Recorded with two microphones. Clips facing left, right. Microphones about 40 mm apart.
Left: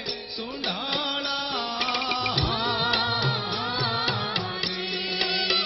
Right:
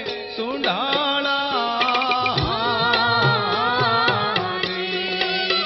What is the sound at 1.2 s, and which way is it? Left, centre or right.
Music, right.